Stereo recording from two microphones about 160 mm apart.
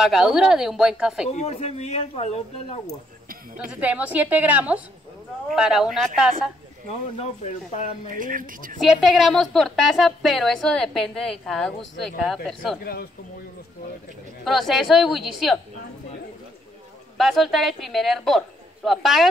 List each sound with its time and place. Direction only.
0.0 s a woman's voice: centre (ahead or behind)
1.3 s speech: 40° left (ahead or behind)
3.5 s a woman's voice: 10° right (ahead or behind)
7.2 s speech: 45° left (ahead or behind)
8.2 s speech: 60° right (ahead or behind)
8.7 s a woman's voice: centre (ahead or behind)
12.8 s speech: 70° left (ahead or behind)
14.4 s a woman's voice: centre (ahead or behind)
17.2 s a woman's voice: centre (ahead or behind)